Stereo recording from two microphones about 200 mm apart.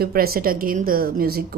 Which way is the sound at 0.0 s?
50° right (ahead or behind).